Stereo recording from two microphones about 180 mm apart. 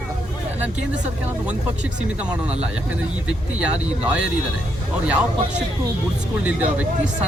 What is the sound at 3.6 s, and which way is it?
Speech, 5° right (ahead or behind).